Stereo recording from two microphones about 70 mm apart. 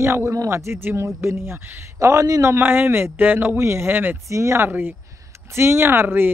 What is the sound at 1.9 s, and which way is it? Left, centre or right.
Speech, right.